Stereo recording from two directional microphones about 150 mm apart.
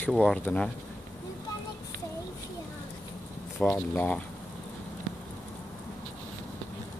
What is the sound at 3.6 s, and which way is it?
Speech, 10° left (ahead or behind).